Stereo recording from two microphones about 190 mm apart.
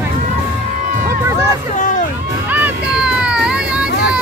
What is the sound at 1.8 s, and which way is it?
Hubbub, 40° left (ahead or behind).